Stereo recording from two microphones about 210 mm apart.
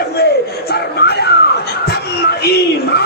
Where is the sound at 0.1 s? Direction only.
50° left (ahead or behind).